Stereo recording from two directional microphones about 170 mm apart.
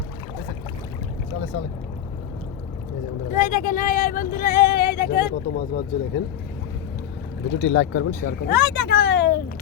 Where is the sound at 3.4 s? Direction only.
55° left (ahead or behind); by 5.3 s 70° left (ahead or behind).